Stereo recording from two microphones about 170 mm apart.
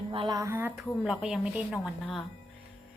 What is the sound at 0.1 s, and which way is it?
Speech, 25° right (ahead or behind).